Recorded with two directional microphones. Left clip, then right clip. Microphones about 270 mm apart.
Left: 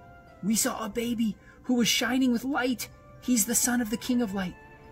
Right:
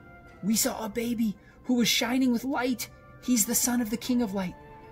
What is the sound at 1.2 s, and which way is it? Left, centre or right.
A woman's voice, centre.